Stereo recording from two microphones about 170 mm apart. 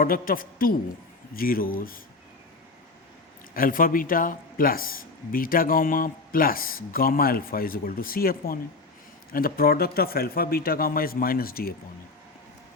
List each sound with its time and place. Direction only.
0.0 s speech: 55° left (ahead or behind)
3.5 s speech: 55° left (ahead or behind)